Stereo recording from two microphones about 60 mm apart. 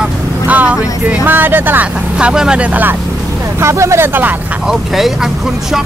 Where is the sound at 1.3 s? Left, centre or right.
Right.